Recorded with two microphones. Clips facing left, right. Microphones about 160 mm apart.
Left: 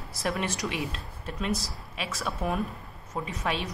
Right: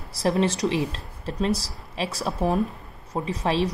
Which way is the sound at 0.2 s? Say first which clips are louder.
Right 8 dB; 30° right (ahead or behind).